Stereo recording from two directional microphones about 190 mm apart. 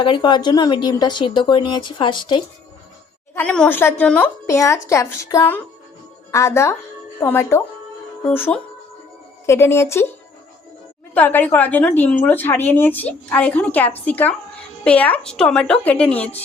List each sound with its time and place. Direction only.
0.0 s speech: 25° left (ahead or behind)
3.3 s a woman's voice: 5° left (ahead or behind)
11.1 s a woman's voice: 10° left (ahead or behind)